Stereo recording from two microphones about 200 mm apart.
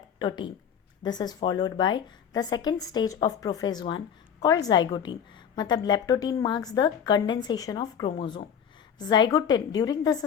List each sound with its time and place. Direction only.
0.2 s a woman's voice: 20° left (ahead or behind)